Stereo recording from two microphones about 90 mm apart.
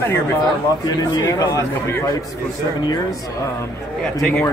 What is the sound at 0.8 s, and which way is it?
Speech, 40° left (ahead or behind).